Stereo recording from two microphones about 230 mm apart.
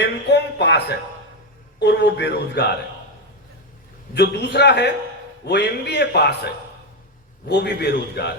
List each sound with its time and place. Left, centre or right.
0.0 s a man's voice: left
4.1 s a man's voice: left